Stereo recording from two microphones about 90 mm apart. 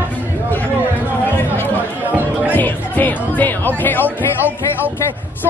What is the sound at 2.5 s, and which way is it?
Music, 20° left (ahead or behind).